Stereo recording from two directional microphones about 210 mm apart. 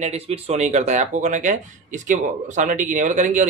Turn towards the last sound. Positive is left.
turn(degrees=-35)  # may be behind; listen again after turning